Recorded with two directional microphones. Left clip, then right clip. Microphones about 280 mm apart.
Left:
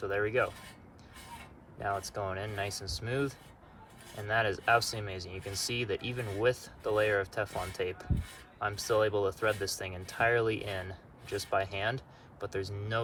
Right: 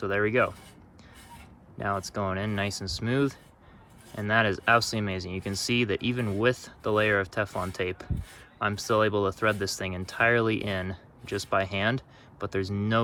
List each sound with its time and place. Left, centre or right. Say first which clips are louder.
0.0 s speech: right 5 dB; centre
1.8 s speech: right 4 dB; centre